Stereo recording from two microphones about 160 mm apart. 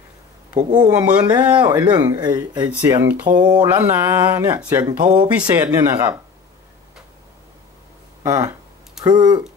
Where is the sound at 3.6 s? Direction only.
15° right (ahead or behind).